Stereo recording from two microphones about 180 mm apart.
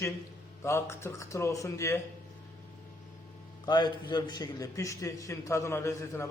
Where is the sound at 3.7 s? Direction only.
25° left (ahead or behind).